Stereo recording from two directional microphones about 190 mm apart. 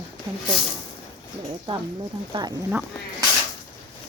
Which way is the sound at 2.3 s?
25° right (ahead or behind).